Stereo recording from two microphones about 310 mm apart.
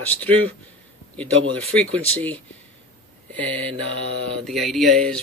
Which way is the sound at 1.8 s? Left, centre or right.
Centre.